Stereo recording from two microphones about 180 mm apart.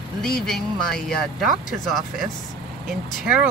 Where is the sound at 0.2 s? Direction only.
Centre (ahead or behind).